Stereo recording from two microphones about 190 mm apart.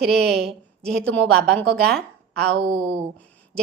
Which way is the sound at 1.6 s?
65° right (ahead or behind).